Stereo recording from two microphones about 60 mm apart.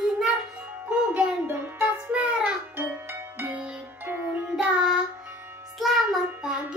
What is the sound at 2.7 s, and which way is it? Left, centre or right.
Music, right.